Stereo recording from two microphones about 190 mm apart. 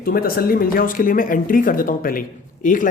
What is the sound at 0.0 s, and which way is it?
Speech, 50° left (ahead or behind).